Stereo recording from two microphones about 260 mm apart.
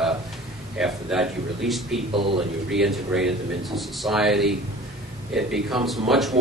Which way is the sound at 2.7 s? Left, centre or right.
Centre.